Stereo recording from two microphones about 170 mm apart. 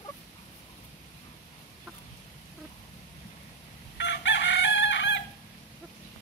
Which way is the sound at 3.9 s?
90° left.